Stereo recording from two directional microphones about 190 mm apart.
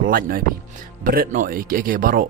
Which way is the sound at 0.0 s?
50° right (ahead or behind).